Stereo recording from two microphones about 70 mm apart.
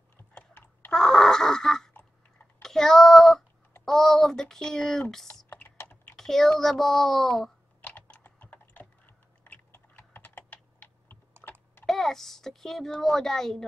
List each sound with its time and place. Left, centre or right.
0.3 s typing: left
0.9 s wheeze: centre
2.6 s child singing: centre
3.8 s speech: centre
5.5 s typing: left
6.1 s a child's voice: centre
7.8 s typing: left
11.8 s a child's voice: centre